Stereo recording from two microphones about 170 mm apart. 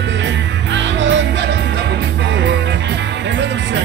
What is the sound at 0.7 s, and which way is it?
Music, 90° right.